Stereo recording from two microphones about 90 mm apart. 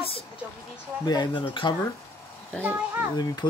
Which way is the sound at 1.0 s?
55° left (ahead or behind).